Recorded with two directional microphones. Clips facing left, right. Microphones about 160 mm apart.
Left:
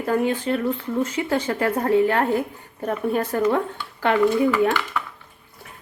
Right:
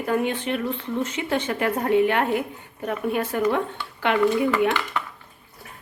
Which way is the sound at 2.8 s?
35° left (ahead or behind).